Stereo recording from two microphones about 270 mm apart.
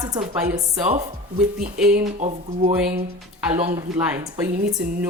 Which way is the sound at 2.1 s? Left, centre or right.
Right.